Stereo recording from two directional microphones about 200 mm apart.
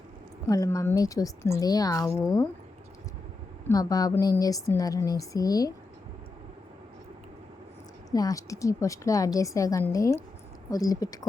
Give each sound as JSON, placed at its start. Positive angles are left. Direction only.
{"t": 0.4, "sound": "a woman's voice", "side_deg": 15}
{"t": 3.7, "sound": "a woman's voice", "side_deg": 20}
{"t": 8.1, "sound": "a woman's voice", "side_deg": 15}